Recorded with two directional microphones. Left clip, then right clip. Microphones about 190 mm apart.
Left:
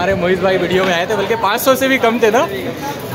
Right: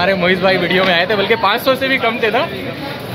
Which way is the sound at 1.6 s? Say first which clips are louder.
Left 2 dB; 20° left (ahead or behind).